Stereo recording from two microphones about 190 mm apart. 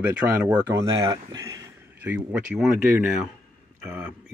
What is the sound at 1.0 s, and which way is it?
Speech, 20° right (ahead or behind).